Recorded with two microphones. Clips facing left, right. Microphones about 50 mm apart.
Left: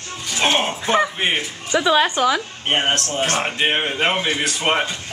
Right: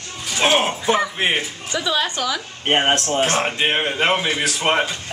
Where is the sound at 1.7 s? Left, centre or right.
Left.